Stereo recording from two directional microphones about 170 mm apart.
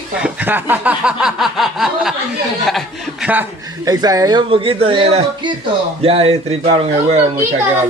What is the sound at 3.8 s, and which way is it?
A man's voice, 20° right (ahead or behind).